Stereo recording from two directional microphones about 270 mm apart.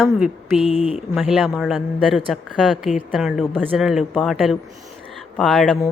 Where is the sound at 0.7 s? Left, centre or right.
Left.